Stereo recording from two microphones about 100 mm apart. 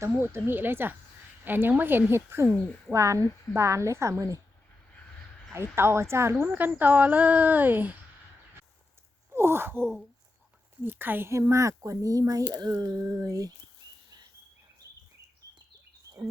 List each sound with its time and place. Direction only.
0.0 s a woman's voice: 25° right (ahead or behind)
5.5 s a woman's voice: 25° right (ahead or behind)
9.3 s sigh: 25° right (ahead or behind)
10.8 s a woman's voice: 20° right (ahead or behind); by 13.5 s 35° right (ahead or behind)